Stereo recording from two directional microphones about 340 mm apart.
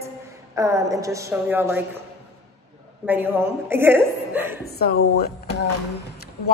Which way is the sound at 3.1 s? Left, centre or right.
Centre.